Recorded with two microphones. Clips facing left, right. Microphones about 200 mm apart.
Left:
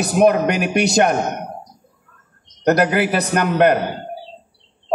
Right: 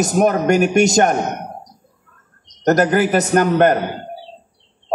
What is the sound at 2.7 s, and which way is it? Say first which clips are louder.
A man's voice: right 2 dB; 45° right (ahead or behind).